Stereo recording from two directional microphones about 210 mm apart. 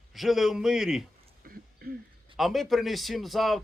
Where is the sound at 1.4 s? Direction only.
45° right (ahead or behind).